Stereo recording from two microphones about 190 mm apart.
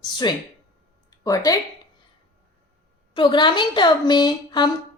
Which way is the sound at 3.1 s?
25° left (ahead or behind).